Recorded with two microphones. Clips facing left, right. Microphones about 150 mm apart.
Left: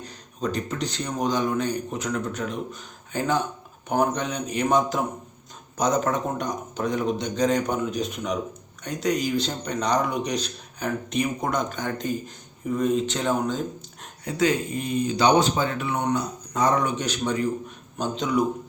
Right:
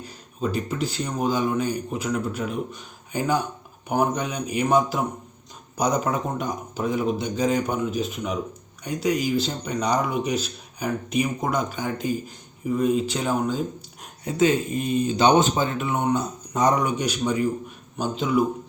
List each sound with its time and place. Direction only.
0.0 s speech: 5° right (ahead or behind)
14.3 s speech: 20° right (ahead or behind)